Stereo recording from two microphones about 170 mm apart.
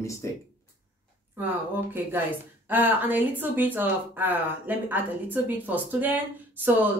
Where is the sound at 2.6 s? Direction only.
10° right (ahead or behind).